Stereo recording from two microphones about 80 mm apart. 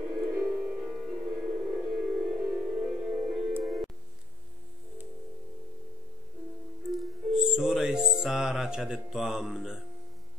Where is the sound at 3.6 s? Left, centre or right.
Centre.